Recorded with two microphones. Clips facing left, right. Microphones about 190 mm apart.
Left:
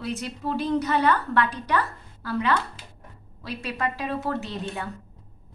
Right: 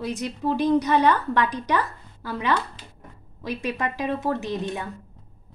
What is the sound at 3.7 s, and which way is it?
A woman's voice, 15° right (ahead or behind).